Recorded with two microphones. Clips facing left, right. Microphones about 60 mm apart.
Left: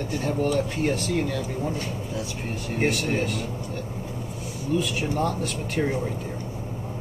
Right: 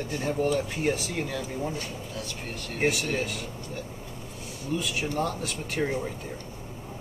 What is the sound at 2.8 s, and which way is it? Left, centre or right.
Speech, centre.